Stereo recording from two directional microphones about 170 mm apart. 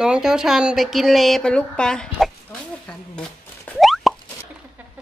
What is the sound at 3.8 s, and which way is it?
Plop, centre (ahead or behind).